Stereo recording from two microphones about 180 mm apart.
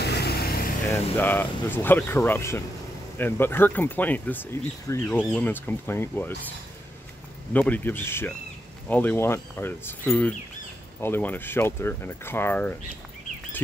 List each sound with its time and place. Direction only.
0.0 s vehicle: 65° left (ahead or behind)
0.9 s speech: 10° left (ahead or behind)
7.5 s speech: 10° left (ahead or behind)